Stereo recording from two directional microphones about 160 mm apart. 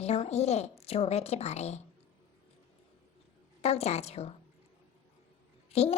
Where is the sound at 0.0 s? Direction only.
40° left (ahead or behind).